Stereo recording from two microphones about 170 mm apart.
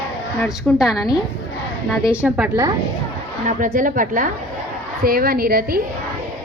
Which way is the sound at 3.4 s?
50° right (ahead or behind).